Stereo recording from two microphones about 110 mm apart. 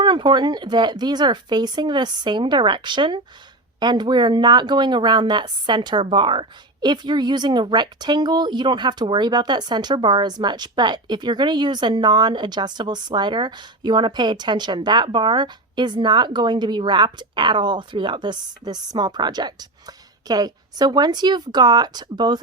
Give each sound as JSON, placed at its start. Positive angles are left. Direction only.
{"t": 0.0, "sound": "speech", "side_deg": -45}